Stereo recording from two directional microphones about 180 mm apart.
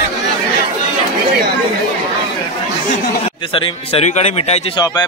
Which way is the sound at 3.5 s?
30° left (ahead or behind).